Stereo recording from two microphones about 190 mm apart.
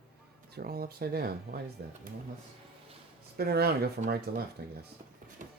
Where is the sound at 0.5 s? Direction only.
50° right (ahead or behind).